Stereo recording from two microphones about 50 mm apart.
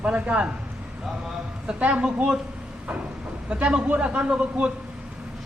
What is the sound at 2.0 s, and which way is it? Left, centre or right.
Speech, centre.